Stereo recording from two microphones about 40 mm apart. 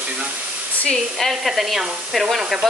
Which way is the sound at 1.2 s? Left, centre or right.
Centre.